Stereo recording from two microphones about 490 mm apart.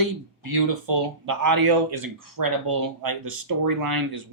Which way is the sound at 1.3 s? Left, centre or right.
Right.